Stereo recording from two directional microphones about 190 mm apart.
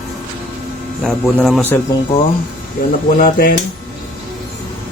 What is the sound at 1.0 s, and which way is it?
Speech, centre (ahead or behind).